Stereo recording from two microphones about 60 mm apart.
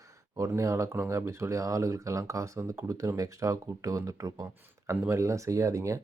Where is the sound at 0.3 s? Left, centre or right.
Right.